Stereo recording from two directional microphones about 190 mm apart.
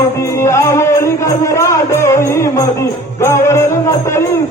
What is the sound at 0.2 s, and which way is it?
Music, 15° left (ahead or behind).